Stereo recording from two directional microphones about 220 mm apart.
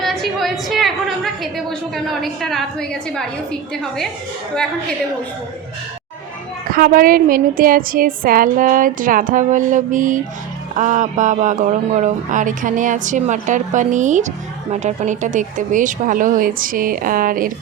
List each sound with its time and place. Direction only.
0.0 s a woman's voice: centre (ahead or behind)
6.7 s speech: 40° right (ahead or behind)